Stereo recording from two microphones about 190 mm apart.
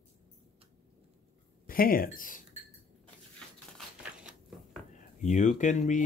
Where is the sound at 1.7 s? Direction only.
50° left (ahead or behind).